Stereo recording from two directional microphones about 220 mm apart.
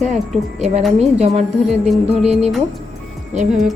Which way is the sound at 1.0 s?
30° right (ahead or behind).